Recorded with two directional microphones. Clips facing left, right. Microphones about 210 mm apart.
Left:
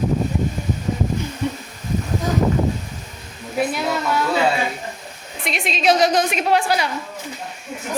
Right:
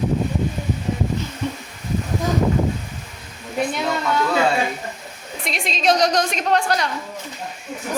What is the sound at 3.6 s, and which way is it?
Speech, 5° left (ahead or behind).